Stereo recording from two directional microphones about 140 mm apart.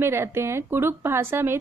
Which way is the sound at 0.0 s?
15° right (ahead or behind).